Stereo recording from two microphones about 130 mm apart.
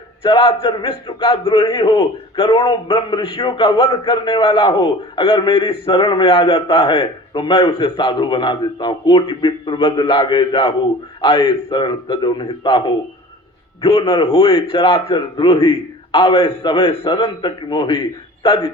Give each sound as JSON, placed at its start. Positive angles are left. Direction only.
{"t": 0.2, "sound": "a man's voice", "side_deg": 40}
{"t": 13.8, "sound": "a man's voice", "side_deg": 45}
{"t": 14.7, "sound": "a man's voice", "side_deg": 35}